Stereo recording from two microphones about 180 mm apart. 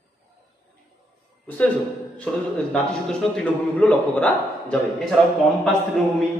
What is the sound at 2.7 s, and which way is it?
A man's voice, 5° left (ahead or behind).